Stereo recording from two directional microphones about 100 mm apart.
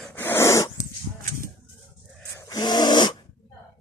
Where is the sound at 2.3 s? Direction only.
30° left (ahead or behind).